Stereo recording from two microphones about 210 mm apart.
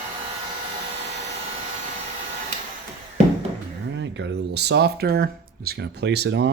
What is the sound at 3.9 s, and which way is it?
Speech, 60° right (ahead or behind).